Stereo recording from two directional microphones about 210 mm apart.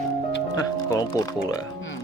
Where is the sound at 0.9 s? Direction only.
20° left (ahead or behind).